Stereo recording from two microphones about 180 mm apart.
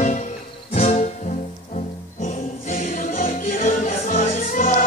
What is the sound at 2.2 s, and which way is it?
Music, 45° left (ahead or behind).